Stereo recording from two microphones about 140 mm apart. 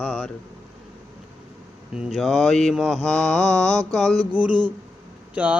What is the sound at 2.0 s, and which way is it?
Speech, centre (ahead or behind).